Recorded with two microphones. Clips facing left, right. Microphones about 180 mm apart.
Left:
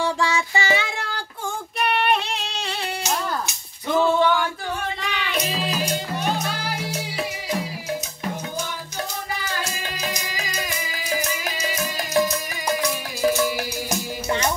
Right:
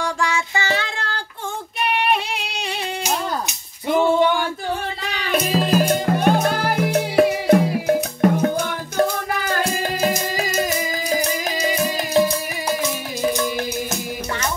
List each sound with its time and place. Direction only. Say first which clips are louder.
0.0 s child singing: even; 15° left (ahead or behind)
1.8 s music: right 1 dB; 5° right (ahead or behind); by 4.5 s 20° right (ahead or behind)
5.0 s music: right 7 dB; 40° right (ahead or behind)
13.8 s music: left 1 dB; 15° left (ahead or behind)